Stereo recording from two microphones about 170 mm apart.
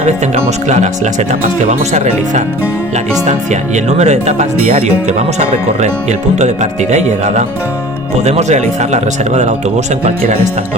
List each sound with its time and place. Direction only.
0.0 s speech: 40° right (ahead or behind)
1.9 s speech: 40° right (ahead or behind)